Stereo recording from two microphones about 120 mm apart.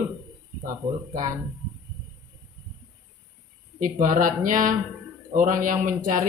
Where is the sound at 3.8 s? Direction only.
90° right.